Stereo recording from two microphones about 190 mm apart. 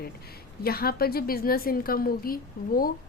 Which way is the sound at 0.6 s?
55° left (ahead or behind).